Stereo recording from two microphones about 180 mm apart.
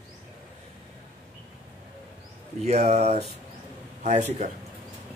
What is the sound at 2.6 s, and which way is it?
Speech, 40° right (ahead or behind).